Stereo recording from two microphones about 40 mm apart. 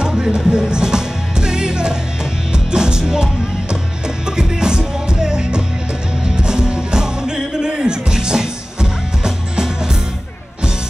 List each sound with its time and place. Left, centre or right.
0.0 s music: centre
4.4 s music: centre